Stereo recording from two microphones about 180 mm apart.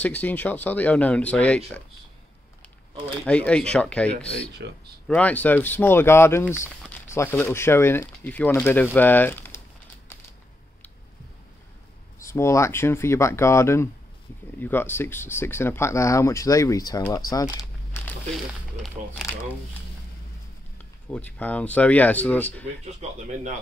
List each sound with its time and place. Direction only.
0.0 s speech: 10° left (ahead or behind)
3.3 s speech: 5° left (ahead or behind)
4.6 s speech: 70° right (ahead or behind)
5.0 s speech: 5° left (ahead or behind)
12.2 s speech: 15° left (ahead or behind)
18.5 s speech: 5° right (ahead or behind)
21.1 s speech: 10° left (ahead or behind)